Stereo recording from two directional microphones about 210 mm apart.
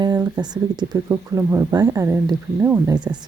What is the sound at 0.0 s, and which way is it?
Speech, 20° right (ahead or behind).